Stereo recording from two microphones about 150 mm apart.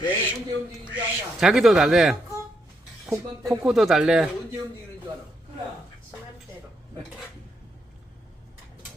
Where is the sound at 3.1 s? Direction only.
20° right (ahead or behind).